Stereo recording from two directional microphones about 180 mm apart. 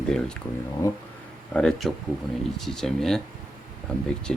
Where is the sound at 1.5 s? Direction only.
5° left (ahead or behind).